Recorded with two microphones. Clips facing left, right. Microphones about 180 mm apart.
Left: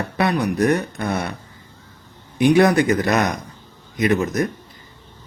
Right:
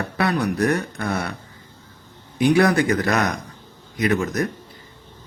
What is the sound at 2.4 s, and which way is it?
Speech, 20° left (ahead or behind).